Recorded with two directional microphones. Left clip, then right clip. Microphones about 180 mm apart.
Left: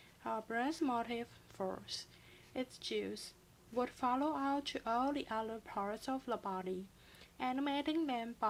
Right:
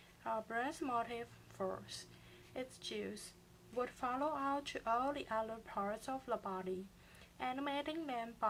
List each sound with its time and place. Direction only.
0.3 s a woman's voice: 40° left (ahead or behind)